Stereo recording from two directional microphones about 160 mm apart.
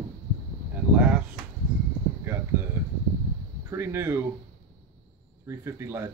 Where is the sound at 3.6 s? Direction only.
15° right (ahead or behind).